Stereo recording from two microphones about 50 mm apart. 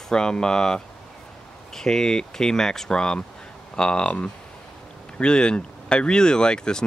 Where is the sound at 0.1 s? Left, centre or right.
Centre.